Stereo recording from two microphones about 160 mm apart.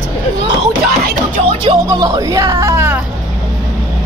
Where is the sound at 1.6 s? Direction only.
25° right (ahead or behind).